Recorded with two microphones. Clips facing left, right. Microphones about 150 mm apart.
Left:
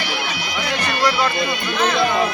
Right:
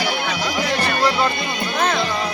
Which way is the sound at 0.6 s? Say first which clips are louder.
Even; 35° right (ahead or behind).